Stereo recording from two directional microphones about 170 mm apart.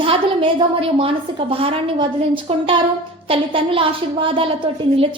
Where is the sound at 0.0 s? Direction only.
35° right (ahead or behind).